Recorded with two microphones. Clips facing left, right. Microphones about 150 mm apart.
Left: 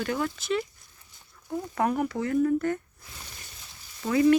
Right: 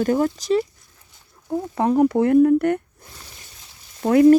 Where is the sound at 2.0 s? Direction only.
55° right (ahead or behind).